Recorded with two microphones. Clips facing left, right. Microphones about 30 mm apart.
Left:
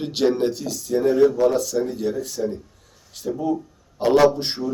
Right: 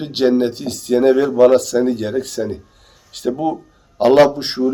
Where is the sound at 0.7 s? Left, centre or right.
Right.